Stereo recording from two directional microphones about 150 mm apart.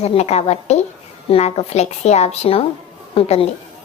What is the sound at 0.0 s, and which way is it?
A woman's voice, 45° left (ahead or behind).